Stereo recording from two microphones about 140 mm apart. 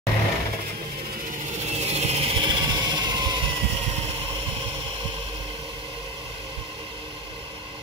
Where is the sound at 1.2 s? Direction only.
60° right (ahead or behind).